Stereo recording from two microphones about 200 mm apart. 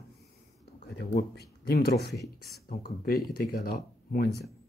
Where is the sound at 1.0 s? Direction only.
50° left (ahead or behind).